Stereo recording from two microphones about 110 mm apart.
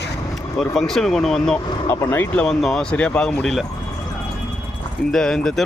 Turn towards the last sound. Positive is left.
turn(degrees=5)  # may be behind; listen again after turning